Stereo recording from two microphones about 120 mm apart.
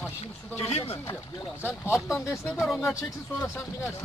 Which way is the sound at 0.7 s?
60° left (ahead or behind).